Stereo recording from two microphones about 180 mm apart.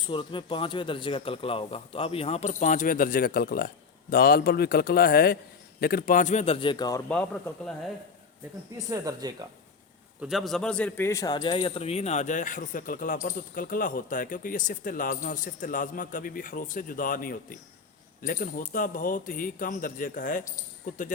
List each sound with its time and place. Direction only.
0.1 s a man's voice: 30° left (ahead or behind)
7.1 s speech: 5° left (ahead or behind)
8.9 s speech: 20° right (ahead or behind)
10.2 s speech: centre (ahead or behind); by 21.0 s 50° left (ahead or behind)